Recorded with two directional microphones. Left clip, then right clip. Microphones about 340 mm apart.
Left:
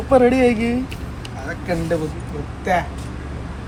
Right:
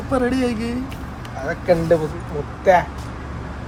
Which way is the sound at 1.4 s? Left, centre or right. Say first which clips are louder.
Right 6 dB; right.